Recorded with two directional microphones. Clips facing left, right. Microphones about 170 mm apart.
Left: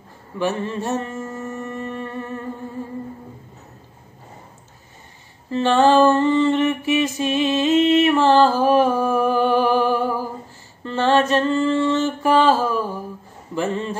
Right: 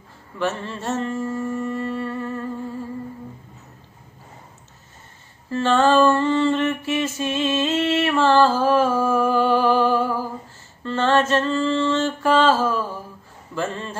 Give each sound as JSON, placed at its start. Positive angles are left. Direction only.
{"t": 0.4, "sound": "mantra", "side_deg": 15}
{"t": 1.8, "sound": "humming", "side_deg": 15}
{"t": 5.5, "sound": "a sound", "side_deg": 15}
{"t": 13.6, "sound": "a man's voice", "side_deg": 15}